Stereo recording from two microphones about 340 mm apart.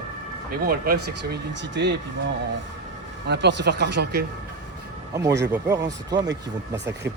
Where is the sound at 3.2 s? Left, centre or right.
Right.